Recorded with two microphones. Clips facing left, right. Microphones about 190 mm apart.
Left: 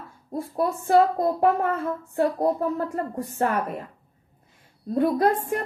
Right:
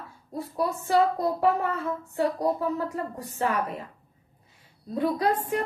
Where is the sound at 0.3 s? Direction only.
50° left (ahead or behind).